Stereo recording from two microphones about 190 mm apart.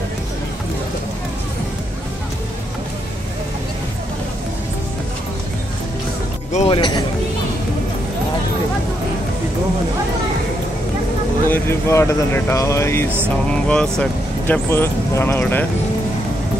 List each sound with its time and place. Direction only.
6.5 s speech: 35° left (ahead or behind)
6.8 s speech: 25° left (ahead or behind)
11.4 s speech: 10° left (ahead or behind)